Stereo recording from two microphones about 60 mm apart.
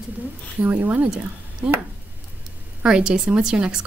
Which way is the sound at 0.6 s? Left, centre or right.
Right.